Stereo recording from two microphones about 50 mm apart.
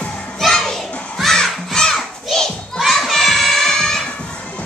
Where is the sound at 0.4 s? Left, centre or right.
Centre.